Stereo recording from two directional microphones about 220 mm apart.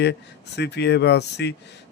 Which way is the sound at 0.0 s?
50° left (ahead or behind).